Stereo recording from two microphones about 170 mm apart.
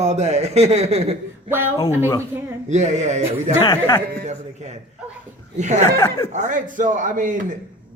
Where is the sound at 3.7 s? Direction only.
20° left (ahead or behind).